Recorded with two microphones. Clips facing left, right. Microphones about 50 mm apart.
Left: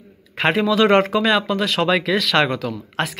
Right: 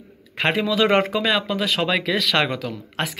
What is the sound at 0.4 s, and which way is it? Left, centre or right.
Speech, centre.